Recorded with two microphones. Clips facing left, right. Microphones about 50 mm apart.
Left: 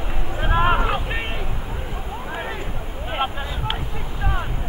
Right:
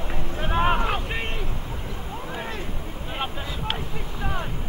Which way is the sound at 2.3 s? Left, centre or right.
Centre.